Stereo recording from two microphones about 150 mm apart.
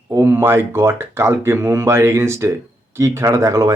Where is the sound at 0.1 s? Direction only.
15° right (ahead or behind).